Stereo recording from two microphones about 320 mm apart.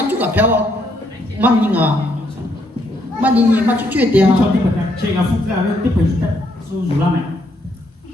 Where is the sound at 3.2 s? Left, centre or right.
Centre.